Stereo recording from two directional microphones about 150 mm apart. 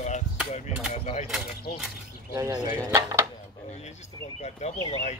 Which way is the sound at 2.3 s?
25° right (ahead or behind).